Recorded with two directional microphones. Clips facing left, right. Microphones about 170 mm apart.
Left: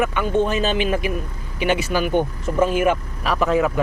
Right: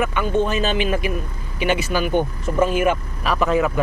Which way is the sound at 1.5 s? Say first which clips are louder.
Even; 50° left (ahead or behind).